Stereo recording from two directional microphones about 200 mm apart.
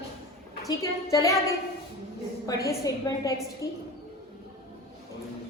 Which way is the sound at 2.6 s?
15° left (ahead or behind).